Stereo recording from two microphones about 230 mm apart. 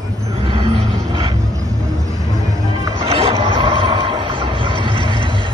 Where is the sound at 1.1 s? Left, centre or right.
Centre.